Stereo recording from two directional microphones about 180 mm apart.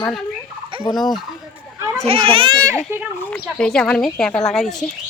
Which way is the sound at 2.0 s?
30° right (ahead or behind).